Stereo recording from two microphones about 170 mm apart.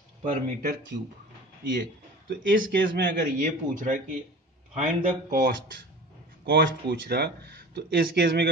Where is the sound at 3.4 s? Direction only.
50° right (ahead or behind).